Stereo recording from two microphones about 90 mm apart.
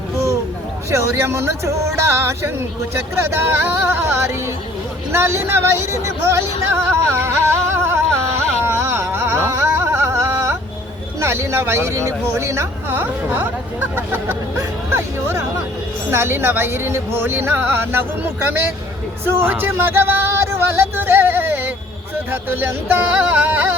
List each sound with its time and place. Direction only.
0.9 s speech: 30° right (ahead or behind)
8.6 s a sound: 25° right (ahead or behind)
11.2 s speech: 30° right (ahead or behind)